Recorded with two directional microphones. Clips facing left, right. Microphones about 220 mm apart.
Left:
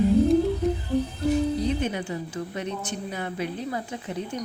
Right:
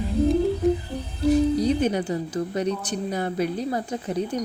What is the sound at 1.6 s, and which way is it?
A woman's voice, 40° right (ahead or behind).